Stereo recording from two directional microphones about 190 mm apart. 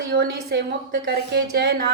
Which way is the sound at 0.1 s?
60° right (ahead or behind).